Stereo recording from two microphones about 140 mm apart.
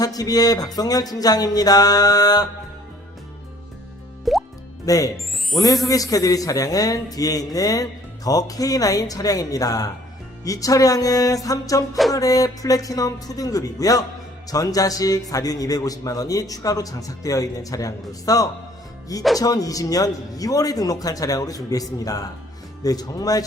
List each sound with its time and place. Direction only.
0.0 s a man's voice: 25° left (ahead or behind)
4.3 s music: centre (ahead or behind)
4.9 s a man's voice: 25° left (ahead or behind)